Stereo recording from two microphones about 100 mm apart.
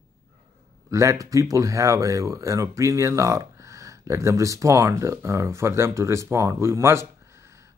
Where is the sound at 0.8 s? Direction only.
30° right (ahead or behind).